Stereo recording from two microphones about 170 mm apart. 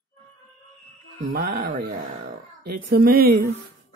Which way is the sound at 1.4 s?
55° right (ahead or behind).